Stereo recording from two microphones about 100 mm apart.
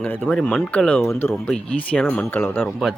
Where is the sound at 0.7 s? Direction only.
10° left (ahead or behind).